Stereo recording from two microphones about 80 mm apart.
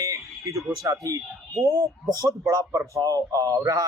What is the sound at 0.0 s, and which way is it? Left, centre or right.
Speech, right.